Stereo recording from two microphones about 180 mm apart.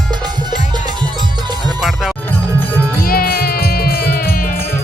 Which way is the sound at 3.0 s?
55° left (ahead or behind).